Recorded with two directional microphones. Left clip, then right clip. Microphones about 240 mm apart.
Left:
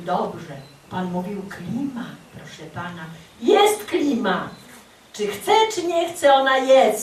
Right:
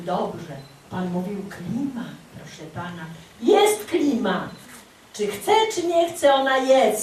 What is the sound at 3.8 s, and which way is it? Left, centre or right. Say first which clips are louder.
A woman's voice: left 1 dB; centre.